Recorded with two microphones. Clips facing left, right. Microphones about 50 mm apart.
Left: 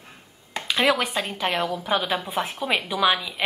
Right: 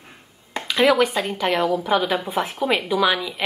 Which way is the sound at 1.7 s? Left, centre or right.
Right.